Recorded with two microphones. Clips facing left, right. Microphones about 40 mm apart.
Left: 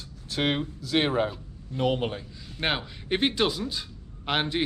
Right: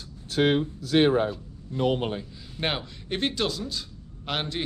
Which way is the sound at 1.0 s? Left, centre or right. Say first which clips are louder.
Right 4 dB; left.